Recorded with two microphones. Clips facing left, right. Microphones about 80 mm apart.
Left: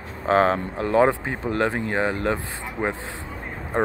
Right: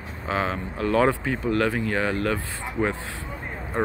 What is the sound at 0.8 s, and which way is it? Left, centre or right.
Speech, left.